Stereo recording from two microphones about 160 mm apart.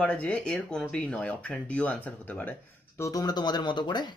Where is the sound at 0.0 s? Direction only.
5° left (ahead or behind).